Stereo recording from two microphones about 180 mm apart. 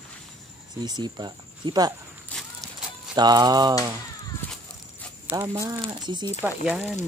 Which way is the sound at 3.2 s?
20° right (ahead or behind).